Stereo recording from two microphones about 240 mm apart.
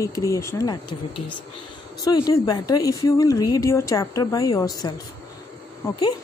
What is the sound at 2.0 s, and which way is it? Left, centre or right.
Speech, centre.